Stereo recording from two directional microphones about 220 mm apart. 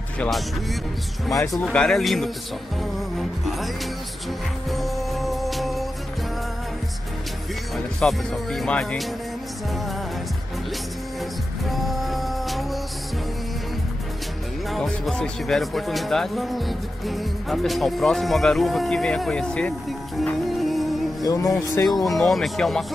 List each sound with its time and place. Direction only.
0.2 s speech: centre (ahead or behind)
4.6 s music: centre (ahead or behind)
7.7 s speech: centre (ahead or behind)
11.7 s music: centre (ahead or behind)
14.7 s speech: 5° left (ahead or behind)
20.2 s music: centre (ahead or behind)
21.2 s speech: 15° left (ahead or behind)
22.0 s speech: centre (ahead or behind)